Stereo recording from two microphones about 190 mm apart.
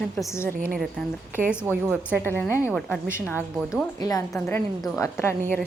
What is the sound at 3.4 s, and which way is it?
Speech, 5° right (ahead or behind).